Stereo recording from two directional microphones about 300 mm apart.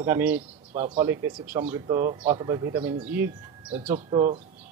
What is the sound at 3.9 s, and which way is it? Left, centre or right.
Speech, centre.